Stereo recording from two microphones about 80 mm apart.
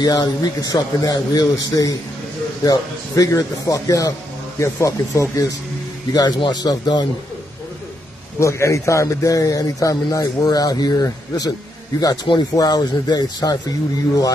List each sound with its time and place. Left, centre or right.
0.0 s speech: left
6.1 s a man's voice: left
8.4 s speech: left
12.5 s speech: left